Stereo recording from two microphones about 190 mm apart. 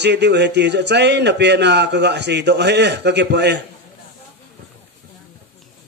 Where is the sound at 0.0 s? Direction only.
65° right (ahead or behind).